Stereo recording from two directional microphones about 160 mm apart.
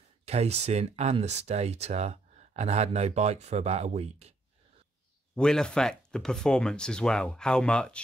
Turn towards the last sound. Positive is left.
turn(degrees=5)  # may be behind; listen again after turning